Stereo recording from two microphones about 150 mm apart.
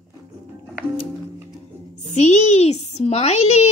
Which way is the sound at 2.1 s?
50° left (ahead or behind).